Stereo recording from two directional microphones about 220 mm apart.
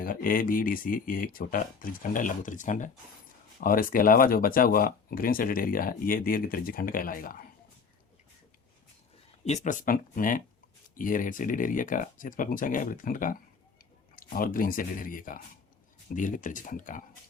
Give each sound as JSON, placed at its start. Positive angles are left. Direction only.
{"t": 0.0, "sound": "speech", "side_deg": 40}
{"t": 9.4, "sound": "speech", "side_deg": 35}